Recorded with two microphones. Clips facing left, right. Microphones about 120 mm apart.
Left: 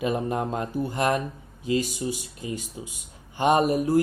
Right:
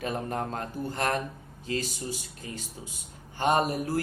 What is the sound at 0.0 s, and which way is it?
Speech, 15° left (ahead or behind).